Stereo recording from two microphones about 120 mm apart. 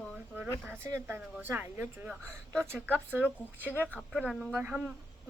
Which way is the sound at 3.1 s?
15° right (ahead or behind).